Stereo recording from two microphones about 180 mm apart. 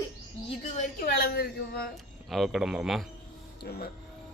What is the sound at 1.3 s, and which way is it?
Speech, 60° left (ahead or behind).